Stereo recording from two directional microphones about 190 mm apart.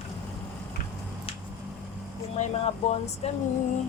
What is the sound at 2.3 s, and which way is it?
Speech, 35° left (ahead or behind).